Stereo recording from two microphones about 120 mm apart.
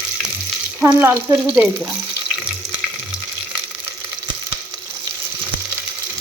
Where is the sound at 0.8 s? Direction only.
20° right (ahead or behind).